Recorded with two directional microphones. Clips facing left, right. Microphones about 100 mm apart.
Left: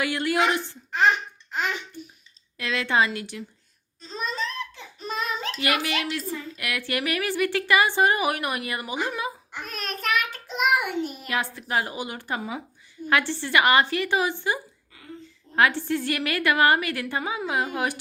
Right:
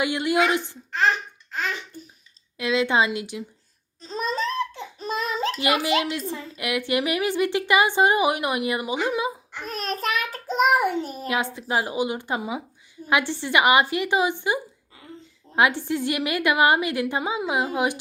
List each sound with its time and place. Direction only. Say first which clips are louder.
0.0 s speech: right 2 dB; 20° right (ahead or behind)
0.9 s laughter: left 1 dB; 15° left (ahead or behind)
2.6 s a woman's voice: right 2 dB; 15° right (ahead or behind)
4.0 s laughter: right 4 dB; 40° right (ahead or behind)
5.5 s speech: right 4 dB; 25° right (ahead or behind)
9.6 s a child's voice: right 2 dB; 30° right (ahead or behind)